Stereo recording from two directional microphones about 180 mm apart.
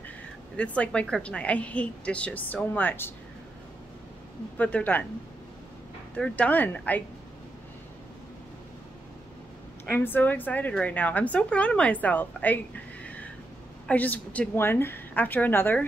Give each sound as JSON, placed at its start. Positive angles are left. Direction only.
{"t": 0.6, "sound": "a woman's voice", "side_deg": 5}
{"t": 4.6, "sound": "a woman's voice", "side_deg": 10}
{"t": 6.1, "sound": "a woman's voice", "side_deg": 5}
{"t": 9.8, "sound": "a woman's voice", "side_deg": 10}
{"t": 13.8, "sound": "a woman's voice", "side_deg": 10}